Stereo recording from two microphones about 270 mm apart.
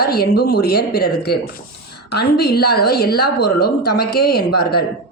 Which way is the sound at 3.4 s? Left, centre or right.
Left.